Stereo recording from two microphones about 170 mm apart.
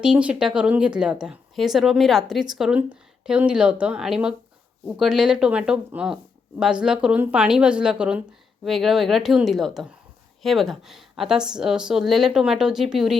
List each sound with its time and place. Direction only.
0.0 s a woman's voice: 5° right (ahead or behind)